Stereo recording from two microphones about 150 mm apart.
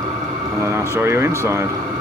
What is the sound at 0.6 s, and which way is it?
Speech, 20° right (ahead or behind).